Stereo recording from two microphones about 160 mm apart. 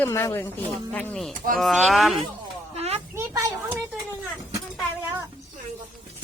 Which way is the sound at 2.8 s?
40° right (ahead or behind).